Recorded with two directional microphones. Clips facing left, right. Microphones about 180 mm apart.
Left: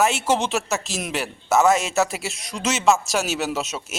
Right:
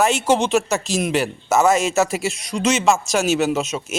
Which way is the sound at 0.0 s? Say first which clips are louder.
Right 3 dB; 5° left (ahead or behind).